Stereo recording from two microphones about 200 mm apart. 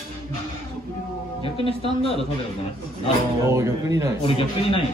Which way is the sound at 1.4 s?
25° left (ahead or behind).